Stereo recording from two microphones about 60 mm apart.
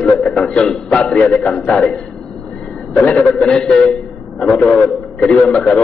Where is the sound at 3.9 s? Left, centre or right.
Centre.